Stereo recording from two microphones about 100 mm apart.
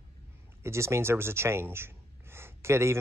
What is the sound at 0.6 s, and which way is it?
Speech, 25° right (ahead or behind).